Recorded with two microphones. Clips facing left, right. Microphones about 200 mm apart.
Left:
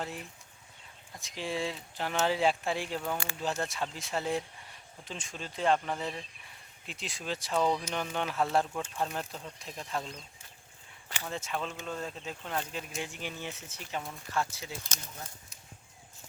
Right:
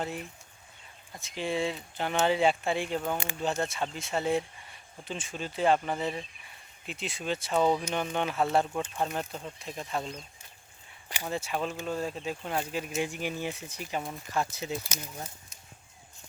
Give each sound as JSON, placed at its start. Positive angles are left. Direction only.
{"t": 1.2, "sound": "speech", "side_deg": 0}
{"t": 3.0, "sound": "speech", "side_deg": -20}
{"t": 3.6, "sound": "speech", "side_deg": 0}